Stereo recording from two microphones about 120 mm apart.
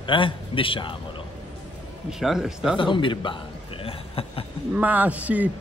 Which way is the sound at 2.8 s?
45° left (ahead or behind).